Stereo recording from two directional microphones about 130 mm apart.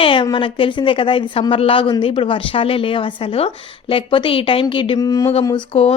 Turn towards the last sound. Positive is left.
turn(degrees=45)  # may be behind; listen again after turning